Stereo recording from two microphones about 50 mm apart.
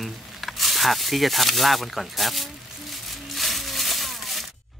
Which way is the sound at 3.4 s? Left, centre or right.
Centre.